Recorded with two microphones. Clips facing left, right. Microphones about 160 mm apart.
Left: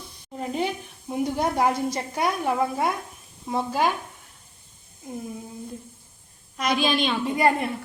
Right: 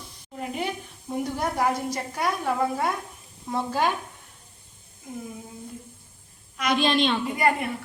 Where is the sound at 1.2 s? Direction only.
20° left (ahead or behind).